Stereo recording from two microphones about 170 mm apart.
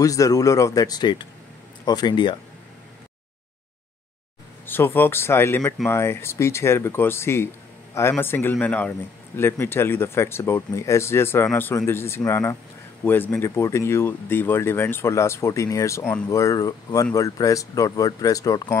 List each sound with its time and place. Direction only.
0.0 s speech: 20° left (ahead or behind)
4.6 s speech: 10° left (ahead or behind)